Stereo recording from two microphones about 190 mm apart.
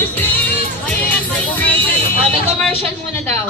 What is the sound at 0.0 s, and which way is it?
Music, 10° left (ahead or behind).